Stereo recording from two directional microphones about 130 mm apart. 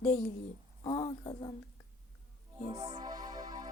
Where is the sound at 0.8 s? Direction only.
40° left (ahead or behind).